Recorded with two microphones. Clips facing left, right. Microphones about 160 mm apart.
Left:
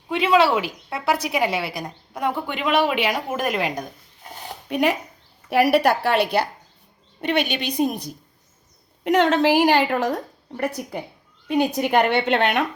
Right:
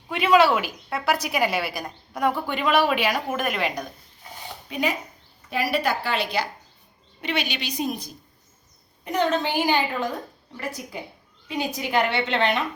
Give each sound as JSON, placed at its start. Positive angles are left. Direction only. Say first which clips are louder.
{"t": 0.1, "sound": "a woman's voice", "louder": "left 1 dB", "side_deg": 25}
{"t": 3.3, "sound": "speech", "louder": "left 2 dB", "side_deg": 35}
{"t": 4.7, "sound": "a woman's voice", "louder": "left 5 dB", "side_deg": 70}
{"t": 9.0, "sound": "a woman's voice", "louder": "left 6 dB", "side_deg": 85}
{"t": 10.8, "sound": "a woman's voice", "louder": "left 5 dB", "side_deg": 50}